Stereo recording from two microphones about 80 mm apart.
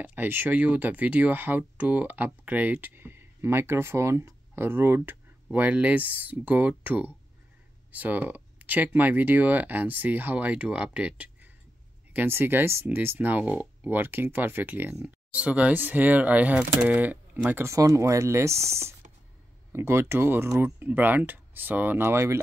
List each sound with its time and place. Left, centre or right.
0.0 s speech: right
12.1 s speech: right
17.6 s speech: right